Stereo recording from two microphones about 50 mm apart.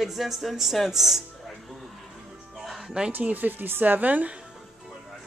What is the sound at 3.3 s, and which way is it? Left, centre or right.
A woman's voice, right.